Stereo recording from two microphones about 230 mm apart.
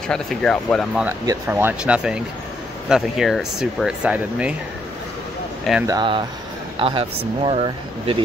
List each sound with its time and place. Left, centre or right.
0.1 s speech: centre
1.0 s speech: centre
5.6 s speech: centre
5.9 s speech: centre